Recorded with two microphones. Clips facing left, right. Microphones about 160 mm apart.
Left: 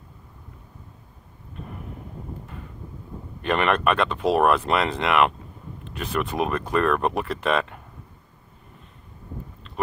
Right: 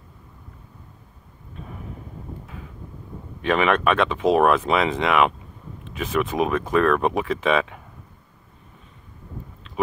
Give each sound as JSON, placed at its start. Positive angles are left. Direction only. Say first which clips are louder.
{"t": 1.5, "sound": "vehicle", "louder": "even", "side_deg": 0}
{"t": 2.4, "sound": "wind noise", "louder": "even", "side_deg": 0}
{"t": 3.4, "sound": "speech", "louder": "right 2 dB", "side_deg": 0}